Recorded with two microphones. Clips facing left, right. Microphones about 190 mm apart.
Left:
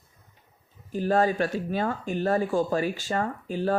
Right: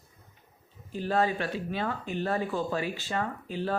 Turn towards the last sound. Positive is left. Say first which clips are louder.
# left 5 dB
turn(degrees=45)  # may be behind; listen again after turning